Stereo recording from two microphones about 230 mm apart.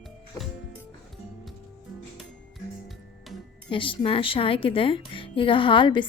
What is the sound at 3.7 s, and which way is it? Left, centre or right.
Speech, left.